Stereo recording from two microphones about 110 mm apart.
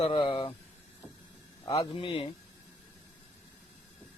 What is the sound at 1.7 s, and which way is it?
Speech, 55° left (ahead or behind).